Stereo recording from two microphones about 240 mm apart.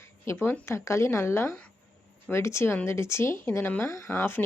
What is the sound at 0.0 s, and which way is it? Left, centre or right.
Speech, centre.